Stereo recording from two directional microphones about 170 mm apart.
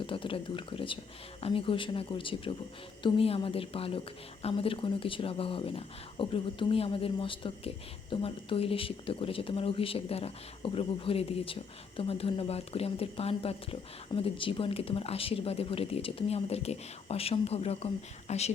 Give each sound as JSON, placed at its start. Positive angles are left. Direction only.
{"t": 0.0, "sound": "speech", "side_deg": 30}